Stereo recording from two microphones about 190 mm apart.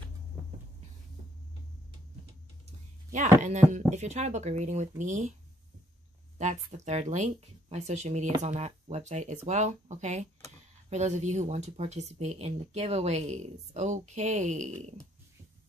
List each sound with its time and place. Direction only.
0.3 s a sound: 5° right (ahead or behind)
3.1 s speech: 40° right (ahead or behind)
6.3 s speech: 35° right (ahead or behind)